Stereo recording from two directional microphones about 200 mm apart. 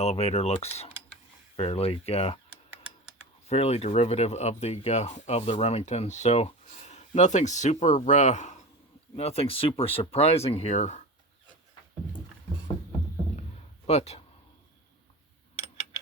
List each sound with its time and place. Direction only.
0.0 s speech: 30° left (ahead or behind)
3.4 s speech: 30° left (ahead or behind)
13.8 s speech: 30° left (ahead or behind)